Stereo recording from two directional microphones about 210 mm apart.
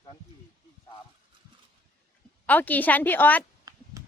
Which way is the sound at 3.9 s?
15° right (ahead or behind).